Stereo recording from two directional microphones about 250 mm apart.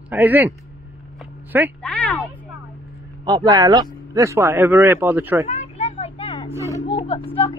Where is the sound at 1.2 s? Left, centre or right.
Centre.